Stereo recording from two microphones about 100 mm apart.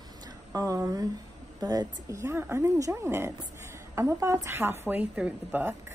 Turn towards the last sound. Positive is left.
turn(degrees=-15)  # may be behind; listen again after turning